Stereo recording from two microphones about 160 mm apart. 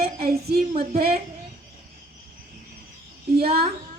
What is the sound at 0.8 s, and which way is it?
Speech, 70° right (ahead or behind).